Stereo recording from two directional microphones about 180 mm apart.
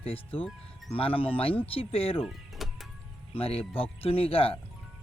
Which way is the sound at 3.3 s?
30° left (ahead or behind).